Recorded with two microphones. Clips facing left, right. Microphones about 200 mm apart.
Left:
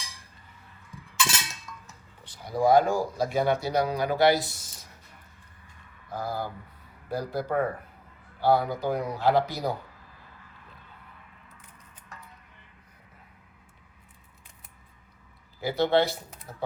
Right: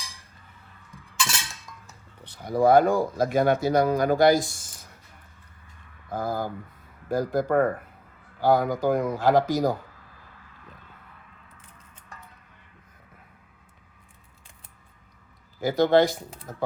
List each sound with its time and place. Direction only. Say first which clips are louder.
1.7 s a sound: left 2 dB; 20° right (ahead or behind)
2.2 s speech: right 3 dB; 60° right (ahead or behind)
6.1 s speech: right 4 dB; 50° right (ahead or behind)
15.6 s speech: right 4 dB; 45° right (ahead or behind)